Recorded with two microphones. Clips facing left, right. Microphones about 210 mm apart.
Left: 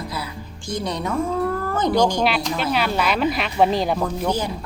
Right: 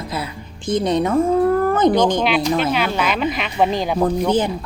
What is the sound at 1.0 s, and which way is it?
Speech, 50° right (ahead or behind).